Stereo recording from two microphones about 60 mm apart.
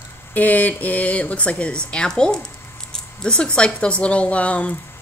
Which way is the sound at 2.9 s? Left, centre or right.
Centre.